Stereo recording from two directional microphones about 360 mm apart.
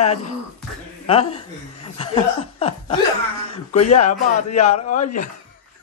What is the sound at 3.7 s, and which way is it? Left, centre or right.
Speech, centre.